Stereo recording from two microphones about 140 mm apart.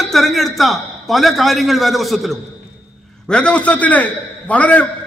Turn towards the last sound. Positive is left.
turn(degrees=10)  # may be behind; listen again after turning